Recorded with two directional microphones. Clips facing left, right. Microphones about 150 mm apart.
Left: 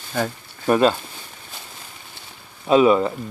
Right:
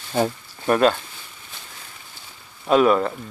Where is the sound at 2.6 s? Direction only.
5° left (ahead or behind).